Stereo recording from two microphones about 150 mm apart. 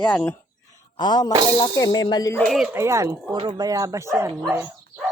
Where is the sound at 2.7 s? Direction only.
20° right (ahead or behind).